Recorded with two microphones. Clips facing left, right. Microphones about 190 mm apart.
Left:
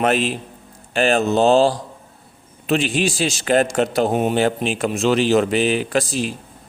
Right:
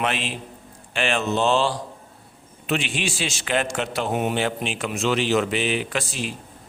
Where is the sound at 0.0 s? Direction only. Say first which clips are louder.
Left 8 dB; 40° left (ahead or behind).